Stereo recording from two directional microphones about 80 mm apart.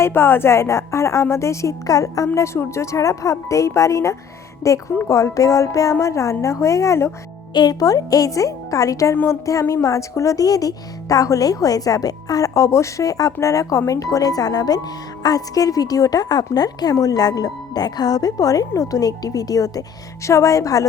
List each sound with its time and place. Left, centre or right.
0.0 s a woman's voice: left
7.5 s speech: left
9.1 s speech: left